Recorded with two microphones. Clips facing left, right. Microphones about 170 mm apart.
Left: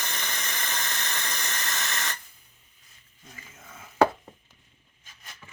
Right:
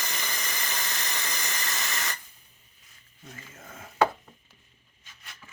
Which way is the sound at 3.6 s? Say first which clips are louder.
Right 2 dB; 50° right (ahead or behind).